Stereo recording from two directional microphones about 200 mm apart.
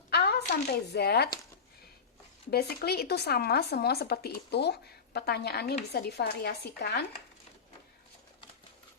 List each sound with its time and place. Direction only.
0.1 s speech: 55° left (ahead or behind)
2.5 s speech: 50° left (ahead or behind)